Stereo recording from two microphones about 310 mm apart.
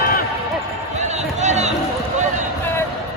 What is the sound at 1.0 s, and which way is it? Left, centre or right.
Run, right.